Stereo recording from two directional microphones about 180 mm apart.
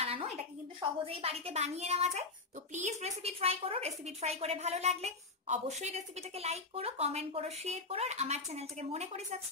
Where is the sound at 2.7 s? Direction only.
40° right (ahead or behind).